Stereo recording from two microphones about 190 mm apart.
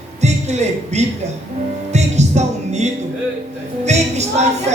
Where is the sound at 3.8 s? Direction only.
35° right (ahead or behind).